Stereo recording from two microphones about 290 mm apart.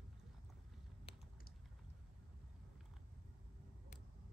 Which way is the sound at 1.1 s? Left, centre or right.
Centre.